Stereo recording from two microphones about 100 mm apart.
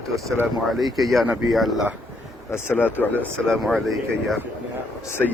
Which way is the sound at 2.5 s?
20° left (ahead or behind).